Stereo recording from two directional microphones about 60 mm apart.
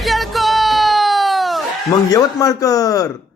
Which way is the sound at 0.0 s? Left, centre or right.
Centre.